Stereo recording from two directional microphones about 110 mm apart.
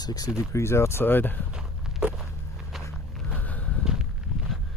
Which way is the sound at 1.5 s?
10° right (ahead or behind).